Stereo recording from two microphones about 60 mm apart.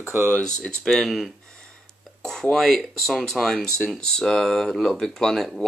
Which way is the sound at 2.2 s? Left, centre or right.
Centre.